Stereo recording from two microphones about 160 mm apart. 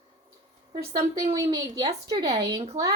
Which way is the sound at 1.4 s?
25° right (ahead or behind).